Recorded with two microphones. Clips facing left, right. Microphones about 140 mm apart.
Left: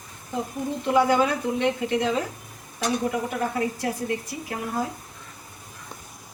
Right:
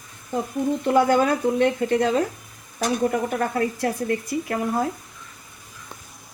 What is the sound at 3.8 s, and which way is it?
Dishes, 50° right (ahead or behind).